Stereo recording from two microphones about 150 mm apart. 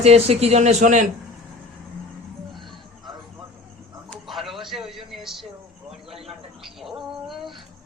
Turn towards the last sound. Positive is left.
turn(degrees=0)  # may be behind; listen again after turning